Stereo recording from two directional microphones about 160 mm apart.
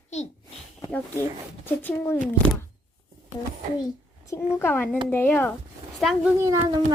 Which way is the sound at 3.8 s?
25° left (ahead or behind).